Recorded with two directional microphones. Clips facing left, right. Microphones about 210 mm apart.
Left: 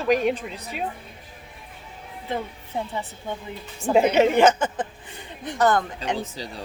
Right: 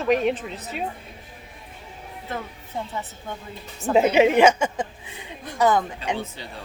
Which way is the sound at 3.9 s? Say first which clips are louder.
Right 1 dB; 5° right (ahead or behind).